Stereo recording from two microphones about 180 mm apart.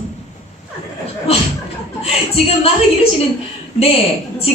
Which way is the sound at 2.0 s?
35° left (ahead or behind).